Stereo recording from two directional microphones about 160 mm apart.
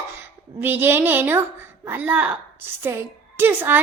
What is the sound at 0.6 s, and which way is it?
Speech, 15° right (ahead or behind).